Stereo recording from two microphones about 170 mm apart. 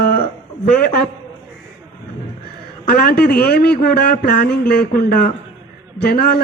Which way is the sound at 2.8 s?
60° left (ahead or behind).